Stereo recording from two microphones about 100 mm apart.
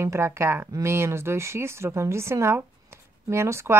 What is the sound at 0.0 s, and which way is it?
Speech, 25° right (ahead or behind).